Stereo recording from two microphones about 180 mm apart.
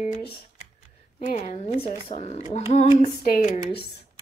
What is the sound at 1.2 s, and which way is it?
Speech, 40° left (ahead or behind).